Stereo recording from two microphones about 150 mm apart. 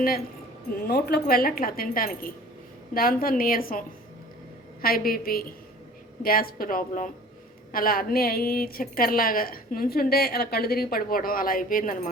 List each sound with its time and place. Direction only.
0.8 s a woman's voice: 90° left; by 12.1 s 70° left (ahead or behind)